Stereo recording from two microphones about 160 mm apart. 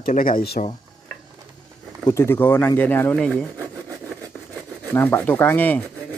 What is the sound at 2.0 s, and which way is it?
Speech, 20° left (ahead or behind).